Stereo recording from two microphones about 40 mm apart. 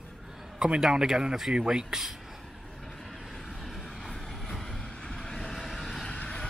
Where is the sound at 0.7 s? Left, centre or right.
Centre.